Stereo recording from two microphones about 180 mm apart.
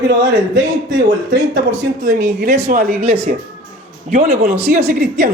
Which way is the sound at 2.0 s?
65° right (ahead or behind).